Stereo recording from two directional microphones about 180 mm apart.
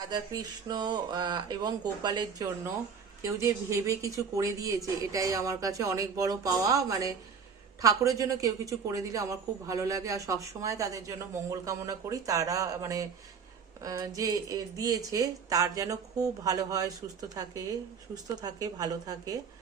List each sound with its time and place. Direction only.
0.1 s a woman's voice: 25° right (ahead or behind)